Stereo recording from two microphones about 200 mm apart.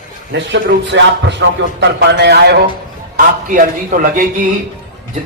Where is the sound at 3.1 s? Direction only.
45° right (ahead or behind).